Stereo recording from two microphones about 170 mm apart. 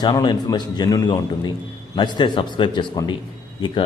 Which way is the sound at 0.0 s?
25° left (ahead or behind).